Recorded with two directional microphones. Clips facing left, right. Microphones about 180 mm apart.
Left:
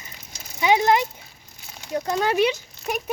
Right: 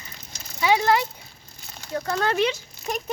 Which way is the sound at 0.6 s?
20° left (ahead or behind).